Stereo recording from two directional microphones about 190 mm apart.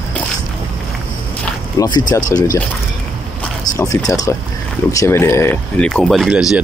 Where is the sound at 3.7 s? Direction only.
20° left (ahead or behind); by 6.4 s centre (ahead or behind).